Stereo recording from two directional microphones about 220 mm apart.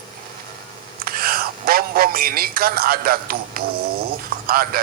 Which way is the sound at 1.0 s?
40° right (ahead or behind).